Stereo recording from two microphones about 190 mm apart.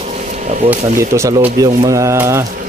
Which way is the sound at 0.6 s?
15° right (ahead or behind).